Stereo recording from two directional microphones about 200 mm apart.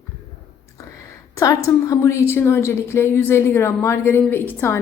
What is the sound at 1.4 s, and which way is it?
A woman's voice, 15° left (ahead or behind).